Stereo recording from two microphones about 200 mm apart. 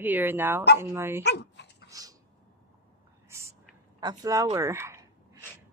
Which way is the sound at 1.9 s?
20° right (ahead or behind).